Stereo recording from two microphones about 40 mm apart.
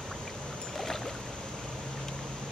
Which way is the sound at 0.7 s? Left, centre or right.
Centre.